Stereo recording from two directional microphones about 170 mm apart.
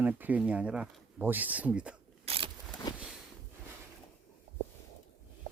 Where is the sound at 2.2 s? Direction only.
35° right (ahead or behind).